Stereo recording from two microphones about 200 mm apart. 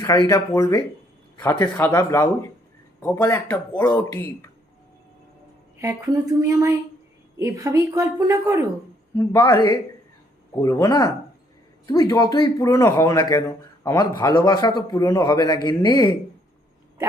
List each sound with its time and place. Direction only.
0.0 s a man's voice: 15° left (ahead or behind)
5.8 s a woman's voice: 15° right (ahead or behind)
9.1 s speech: 10° left (ahead or behind)
10.6 s a man's voice: 15° left (ahead or behind)